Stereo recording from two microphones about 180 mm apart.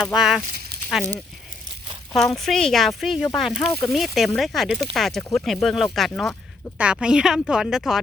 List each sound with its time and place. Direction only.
0.0 s a woman's voice: 5° right (ahead or behind)
2.1 s a woman's voice: centre (ahead or behind)